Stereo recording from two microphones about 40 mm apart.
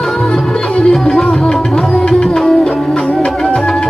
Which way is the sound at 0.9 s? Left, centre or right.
Centre.